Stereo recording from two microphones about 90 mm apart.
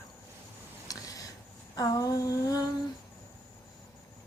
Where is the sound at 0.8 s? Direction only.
40° left (ahead or behind).